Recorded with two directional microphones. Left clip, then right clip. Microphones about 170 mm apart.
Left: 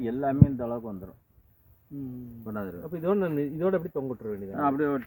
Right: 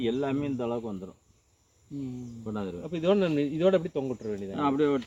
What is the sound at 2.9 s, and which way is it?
Speech, 10° left (ahead or behind).